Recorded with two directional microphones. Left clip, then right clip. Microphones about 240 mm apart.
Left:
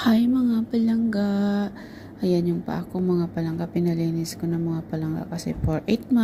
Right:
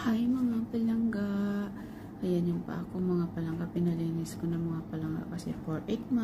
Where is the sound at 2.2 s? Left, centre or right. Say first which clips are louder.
Left 9 dB; left.